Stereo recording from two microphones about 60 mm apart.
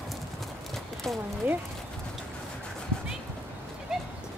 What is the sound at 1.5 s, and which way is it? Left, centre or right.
Speech, right.